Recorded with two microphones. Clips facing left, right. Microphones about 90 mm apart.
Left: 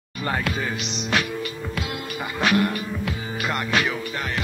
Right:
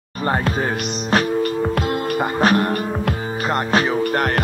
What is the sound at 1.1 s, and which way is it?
Music, 45° right (ahead or behind).